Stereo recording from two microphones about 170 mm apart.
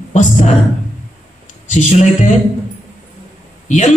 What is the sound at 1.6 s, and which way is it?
Speech, 45° left (ahead or behind).